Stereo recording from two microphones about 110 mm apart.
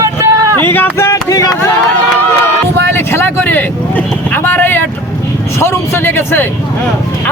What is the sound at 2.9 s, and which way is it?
Vehicle, 20° left (ahead or behind).